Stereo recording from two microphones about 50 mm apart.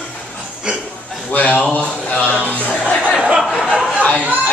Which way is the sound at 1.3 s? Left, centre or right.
Left.